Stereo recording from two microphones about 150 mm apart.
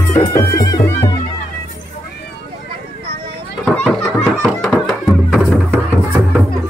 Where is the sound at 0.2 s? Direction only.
25° left (ahead or behind).